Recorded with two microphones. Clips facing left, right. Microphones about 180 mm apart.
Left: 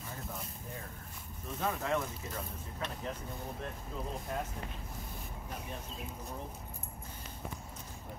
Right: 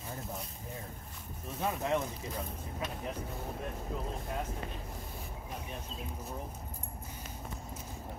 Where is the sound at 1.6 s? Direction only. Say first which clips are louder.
Right 1 dB; 20° right (ahead or behind).